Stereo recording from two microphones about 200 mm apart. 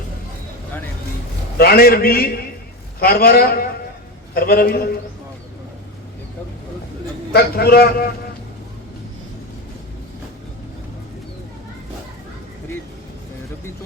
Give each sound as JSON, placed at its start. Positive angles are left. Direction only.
{"t": 1.5, "sound": "a man's voice", "side_deg": 50}
{"t": 7.3, "sound": "a man's voice", "side_deg": 50}